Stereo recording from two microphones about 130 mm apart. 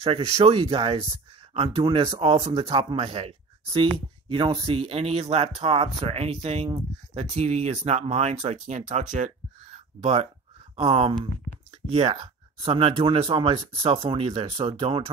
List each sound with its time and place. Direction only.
0.0 s speech: 50° right (ahead or behind)
9.1 s a sound: 65° right (ahead or behind)
10.8 s speech: 45° right (ahead or behind)